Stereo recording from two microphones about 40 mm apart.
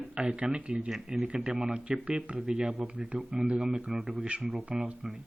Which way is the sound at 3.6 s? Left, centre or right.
Centre.